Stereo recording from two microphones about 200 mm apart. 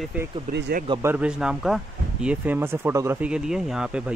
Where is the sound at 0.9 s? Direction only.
10° right (ahead or behind).